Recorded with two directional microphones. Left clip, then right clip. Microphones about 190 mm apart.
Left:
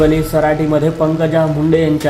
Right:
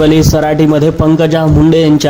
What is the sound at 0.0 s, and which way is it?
A man's voice, 35° right (ahead or behind).